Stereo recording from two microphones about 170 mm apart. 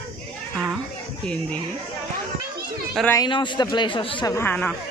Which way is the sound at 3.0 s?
15° left (ahead or behind).